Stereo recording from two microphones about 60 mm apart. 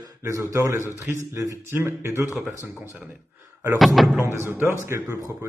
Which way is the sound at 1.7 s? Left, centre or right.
Right.